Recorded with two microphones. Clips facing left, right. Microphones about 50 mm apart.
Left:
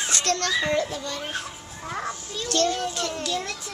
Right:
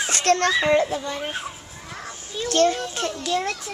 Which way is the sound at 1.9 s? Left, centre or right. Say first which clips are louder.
Left 6 dB; left.